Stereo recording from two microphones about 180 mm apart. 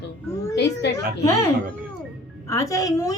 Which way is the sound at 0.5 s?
70° left (ahead or behind).